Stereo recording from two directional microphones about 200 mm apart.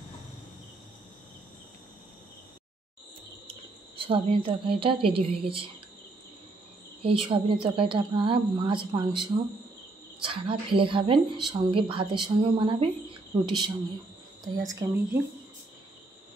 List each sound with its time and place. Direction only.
3.9 s a woman's voice: 25° right (ahead or behind)
7.0 s a woman's voice: 25° right (ahead or behind)